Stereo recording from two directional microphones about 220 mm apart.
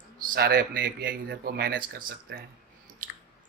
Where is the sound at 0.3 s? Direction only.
45° right (ahead or behind).